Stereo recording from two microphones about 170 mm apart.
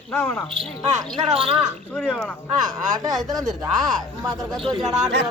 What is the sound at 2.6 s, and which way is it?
Speech, 25° right (ahead or behind).